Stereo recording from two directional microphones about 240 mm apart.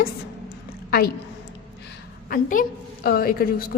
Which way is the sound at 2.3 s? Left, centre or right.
Left.